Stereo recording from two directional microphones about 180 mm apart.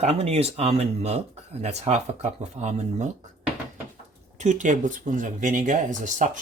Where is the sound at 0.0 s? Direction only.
35° right (ahead or behind).